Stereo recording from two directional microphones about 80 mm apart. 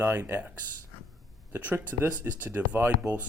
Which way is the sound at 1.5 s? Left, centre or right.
Right.